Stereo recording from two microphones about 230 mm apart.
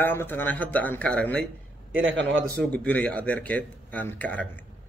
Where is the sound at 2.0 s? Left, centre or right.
Right.